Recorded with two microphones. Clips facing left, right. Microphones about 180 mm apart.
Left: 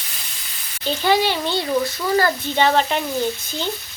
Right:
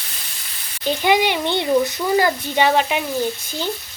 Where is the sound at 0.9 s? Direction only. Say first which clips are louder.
Right 1 dB; 15° right (ahead or behind).